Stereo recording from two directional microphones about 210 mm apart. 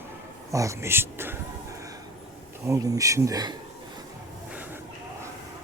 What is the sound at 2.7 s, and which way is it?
Speech, 15° right (ahead or behind).